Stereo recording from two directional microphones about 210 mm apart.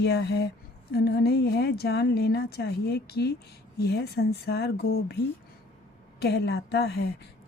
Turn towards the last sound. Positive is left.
turn(degrees=50)  # may be behind; listen again after turning